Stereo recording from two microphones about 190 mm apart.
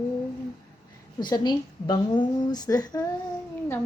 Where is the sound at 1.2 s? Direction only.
20° left (ahead or behind).